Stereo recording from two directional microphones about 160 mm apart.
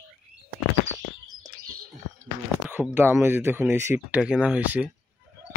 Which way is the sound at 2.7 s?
10° right (ahead or behind).